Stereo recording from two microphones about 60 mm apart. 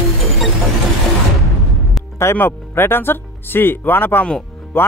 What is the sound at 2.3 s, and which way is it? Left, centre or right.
Speech, left.